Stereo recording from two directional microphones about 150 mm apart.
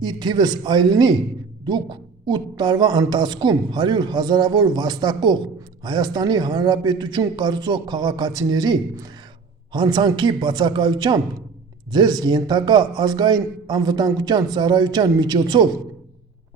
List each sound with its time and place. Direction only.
0.0 s a man's voice: 30° right (ahead or behind)